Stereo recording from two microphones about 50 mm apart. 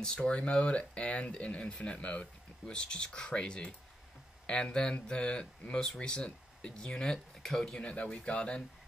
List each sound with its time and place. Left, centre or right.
0.0 s speech: centre
7.8 s speech: left